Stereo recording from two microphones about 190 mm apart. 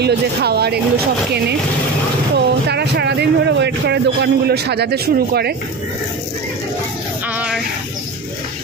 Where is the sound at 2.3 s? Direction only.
60° right (ahead or behind).